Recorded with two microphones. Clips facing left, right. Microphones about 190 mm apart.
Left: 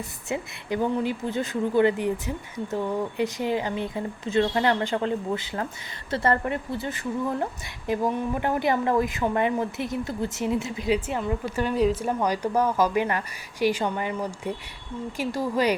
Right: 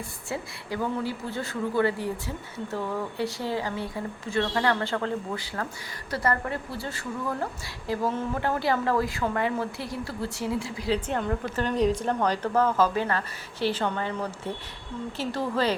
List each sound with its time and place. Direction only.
0.3 s a woman's voice: 20° left (ahead or behind)
11.1 s a woman's voice: 5° left (ahead or behind)